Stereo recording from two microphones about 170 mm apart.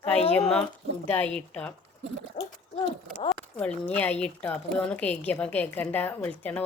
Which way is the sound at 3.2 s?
5° left (ahead or behind).